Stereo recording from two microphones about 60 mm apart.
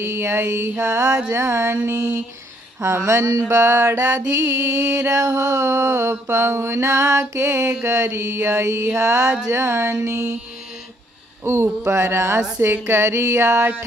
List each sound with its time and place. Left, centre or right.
0.0 s mantra: right
1.3 s mantra: right
2.8 s mantra: right
5.1 s mantra: right
11.4 s mantra: right